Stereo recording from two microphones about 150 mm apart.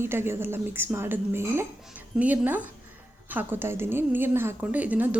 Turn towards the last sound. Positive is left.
turn(degrees=-10)  # may be behind; listen again after turning